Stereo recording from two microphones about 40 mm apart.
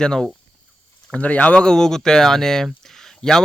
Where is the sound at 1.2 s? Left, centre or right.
Left.